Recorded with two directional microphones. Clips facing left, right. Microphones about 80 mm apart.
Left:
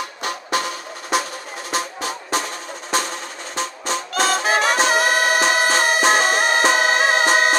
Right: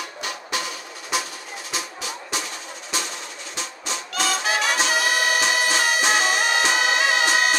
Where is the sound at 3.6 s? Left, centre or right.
Left.